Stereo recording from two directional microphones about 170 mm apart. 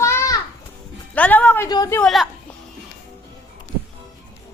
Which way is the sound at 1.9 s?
Centre (ahead or behind).